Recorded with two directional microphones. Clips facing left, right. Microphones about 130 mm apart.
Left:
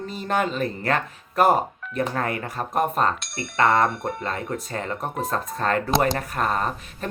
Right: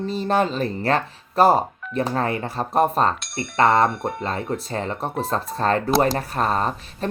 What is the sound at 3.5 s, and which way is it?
Speech, 30° right (ahead or behind).